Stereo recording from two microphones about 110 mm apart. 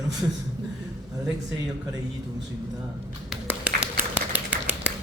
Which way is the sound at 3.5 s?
15° right (ahead or behind).